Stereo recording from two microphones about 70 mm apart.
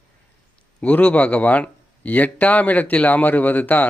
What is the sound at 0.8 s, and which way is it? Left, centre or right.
A man's voice, centre.